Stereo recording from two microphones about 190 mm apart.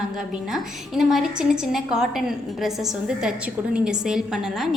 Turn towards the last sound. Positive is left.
turn(degrees=-5)  # may be behind; listen again after turning